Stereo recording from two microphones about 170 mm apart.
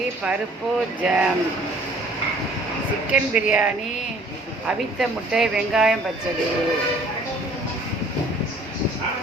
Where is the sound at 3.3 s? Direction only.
5° right (ahead or behind).